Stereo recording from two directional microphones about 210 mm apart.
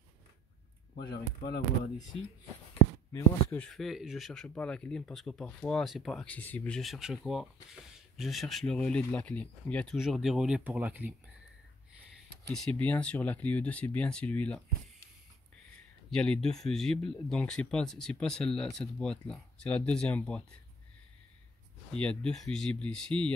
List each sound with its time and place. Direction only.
0.9 s speech: 50° left (ahead or behind)
3.1 s speech: 15° left (ahead or behind); by 11.1 s 5° right (ahead or behind)
12.5 s speech: 5° left (ahead or behind)
16.1 s speech: centre (ahead or behind)
21.9 s speech: 5° left (ahead or behind)